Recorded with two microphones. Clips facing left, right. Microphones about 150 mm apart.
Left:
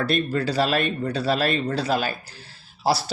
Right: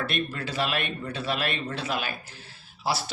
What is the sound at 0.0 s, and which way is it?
Speech, 35° left (ahead or behind).